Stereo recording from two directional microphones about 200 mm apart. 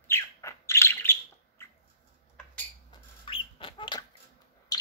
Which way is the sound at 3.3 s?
25° left (ahead or behind).